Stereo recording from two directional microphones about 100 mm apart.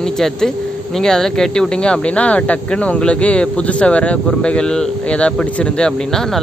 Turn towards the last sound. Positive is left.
turn(degrees=5)  # may be behind; listen again after turning